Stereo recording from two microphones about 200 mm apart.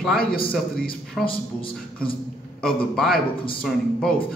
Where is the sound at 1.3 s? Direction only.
25° left (ahead or behind).